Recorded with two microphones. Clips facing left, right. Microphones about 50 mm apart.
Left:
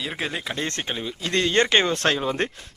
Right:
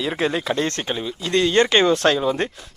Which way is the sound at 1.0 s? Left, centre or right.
Left.